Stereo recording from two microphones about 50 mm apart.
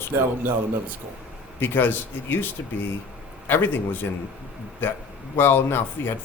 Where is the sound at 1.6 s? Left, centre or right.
Left.